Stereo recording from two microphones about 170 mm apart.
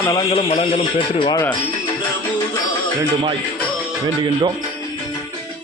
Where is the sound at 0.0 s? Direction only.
25° left (ahead or behind).